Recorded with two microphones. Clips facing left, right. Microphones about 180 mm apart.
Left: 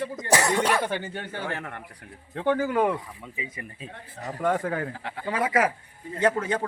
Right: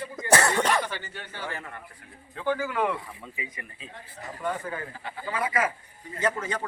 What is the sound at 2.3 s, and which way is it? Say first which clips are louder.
Speech: left 4 dB; 60° left (ahead or behind).